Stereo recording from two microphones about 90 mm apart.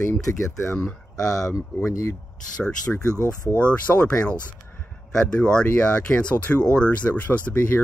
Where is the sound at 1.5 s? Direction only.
35° left (ahead or behind).